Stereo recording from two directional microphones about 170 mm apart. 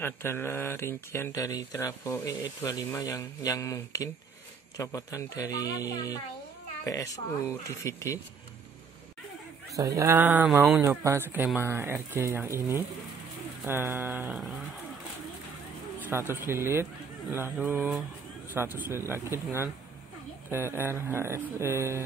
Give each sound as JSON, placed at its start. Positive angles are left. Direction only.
{"t": 0.0, "sound": "speech", "side_deg": 15}
{"t": 9.9, "sound": "speech", "side_deg": -15}
{"t": 16.1, "sound": "speech", "side_deg": -15}